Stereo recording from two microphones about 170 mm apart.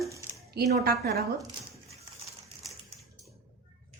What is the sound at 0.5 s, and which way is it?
Speech, 60° right (ahead or behind).